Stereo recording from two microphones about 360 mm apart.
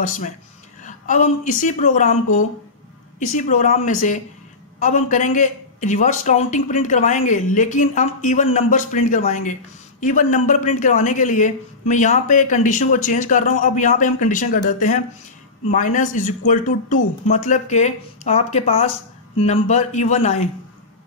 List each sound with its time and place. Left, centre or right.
0.8 s a man's voice: left
3.2 s a man's voice: left